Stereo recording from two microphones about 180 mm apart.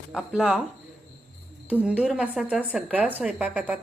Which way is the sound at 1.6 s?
5° right (ahead or behind).